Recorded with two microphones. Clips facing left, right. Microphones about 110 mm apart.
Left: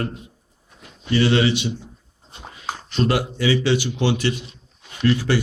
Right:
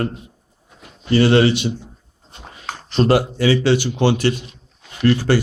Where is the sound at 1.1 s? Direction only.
45° right (ahead or behind).